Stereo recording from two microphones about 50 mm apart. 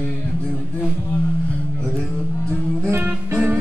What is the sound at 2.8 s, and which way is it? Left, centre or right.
Music, right.